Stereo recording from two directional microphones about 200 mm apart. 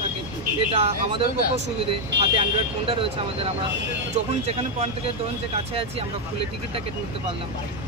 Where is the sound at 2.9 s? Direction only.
25° right (ahead or behind).